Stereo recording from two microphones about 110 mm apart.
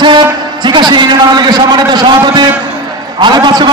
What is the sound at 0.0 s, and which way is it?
A man's voice, 40° right (ahead or behind).